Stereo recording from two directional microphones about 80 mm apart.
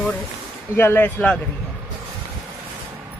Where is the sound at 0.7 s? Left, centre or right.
Left.